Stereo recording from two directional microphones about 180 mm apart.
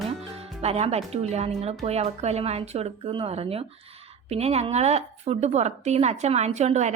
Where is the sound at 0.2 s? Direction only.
35° right (ahead or behind).